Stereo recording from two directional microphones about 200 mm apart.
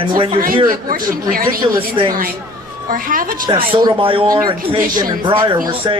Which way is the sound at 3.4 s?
20° right (ahead or behind).